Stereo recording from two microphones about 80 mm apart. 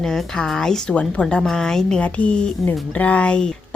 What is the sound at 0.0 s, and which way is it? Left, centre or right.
A woman's voice, centre.